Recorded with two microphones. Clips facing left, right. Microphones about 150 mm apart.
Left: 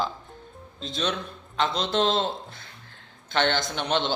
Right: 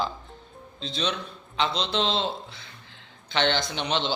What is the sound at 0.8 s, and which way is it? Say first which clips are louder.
A man's voice: left 1 dB; 50° left (ahead or behind).